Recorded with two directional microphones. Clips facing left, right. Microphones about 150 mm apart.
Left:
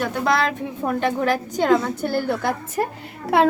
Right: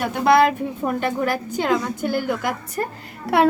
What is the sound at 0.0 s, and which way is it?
A child's voice, 10° right (ahead or behind).